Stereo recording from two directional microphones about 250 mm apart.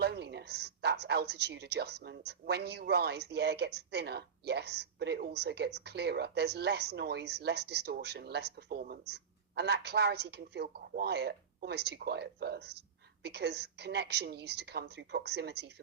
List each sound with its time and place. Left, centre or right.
0.0 s speech: right